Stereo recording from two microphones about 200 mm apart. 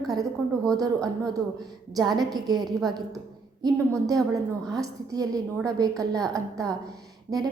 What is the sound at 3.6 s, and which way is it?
A woman's voice, 15° right (ahead or behind).